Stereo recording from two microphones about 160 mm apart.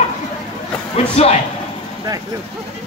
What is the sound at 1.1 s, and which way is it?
Speech, 40° left (ahead or behind).